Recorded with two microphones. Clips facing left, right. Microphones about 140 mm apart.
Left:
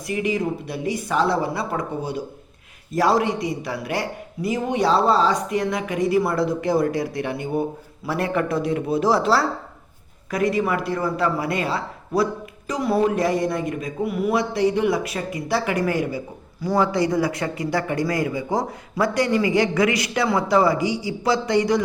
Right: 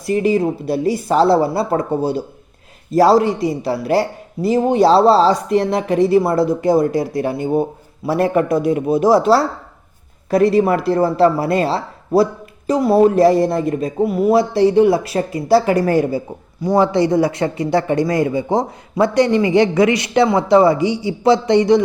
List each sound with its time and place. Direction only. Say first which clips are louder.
0.0 s speech: right 8 dB; 35° right (ahead or behind)